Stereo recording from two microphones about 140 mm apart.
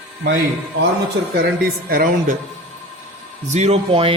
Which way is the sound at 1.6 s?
90° right.